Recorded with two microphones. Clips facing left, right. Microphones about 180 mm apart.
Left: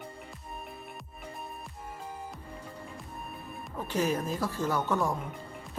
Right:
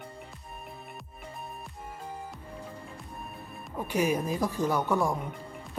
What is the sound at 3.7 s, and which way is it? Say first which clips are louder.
Speech: right 2 dB; 10° right (ahead or behind).